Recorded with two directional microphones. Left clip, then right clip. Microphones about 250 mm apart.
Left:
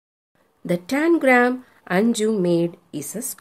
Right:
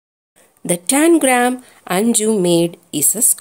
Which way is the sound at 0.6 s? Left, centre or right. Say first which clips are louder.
Right 6 dB; centre.